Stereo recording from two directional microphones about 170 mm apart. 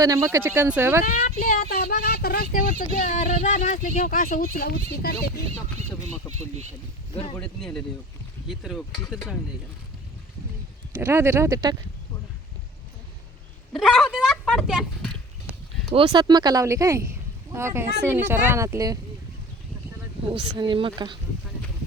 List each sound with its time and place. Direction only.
0.0 s speech: 20° right (ahead or behind)
1.0 s speech: 50° left (ahead or behind)
7.3 s speech: 5° left (ahead or behind)
11.0 s speech: 15° right (ahead or behind)
13.7 s speech: centre (ahead or behind)
15.5 s a sound: 10° right (ahead or behind)
16.0 s speech: 25° right (ahead or behind)
20.3 s speech: 30° right (ahead or behind)